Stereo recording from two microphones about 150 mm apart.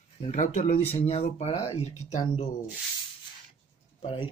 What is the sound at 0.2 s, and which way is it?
Speech, 50° left (ahead or behind).